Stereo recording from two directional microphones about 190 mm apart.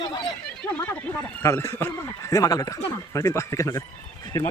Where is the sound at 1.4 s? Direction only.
15° left (ahead or behind).